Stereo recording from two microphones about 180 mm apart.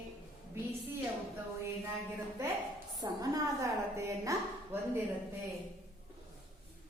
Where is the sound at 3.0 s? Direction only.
20° right (ahead or behind).